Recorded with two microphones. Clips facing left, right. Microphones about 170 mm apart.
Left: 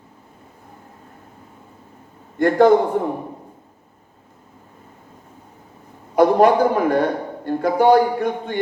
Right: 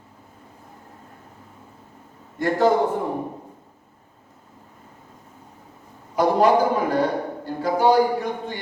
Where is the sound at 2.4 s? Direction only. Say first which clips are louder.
Left 6 dB; 55° left (ahead or behind).